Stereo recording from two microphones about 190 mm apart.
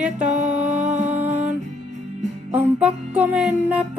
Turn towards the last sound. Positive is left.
turn(degrees=-5)  # may be behind; listen again after turning